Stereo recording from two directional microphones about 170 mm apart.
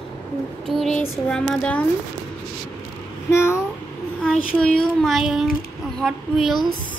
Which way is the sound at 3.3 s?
15° left (ahead or behind).